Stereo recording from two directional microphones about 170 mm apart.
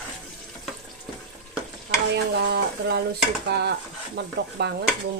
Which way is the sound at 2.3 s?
80° right.